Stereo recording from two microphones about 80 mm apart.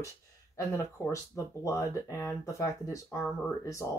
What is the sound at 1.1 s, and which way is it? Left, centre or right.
Speech, left.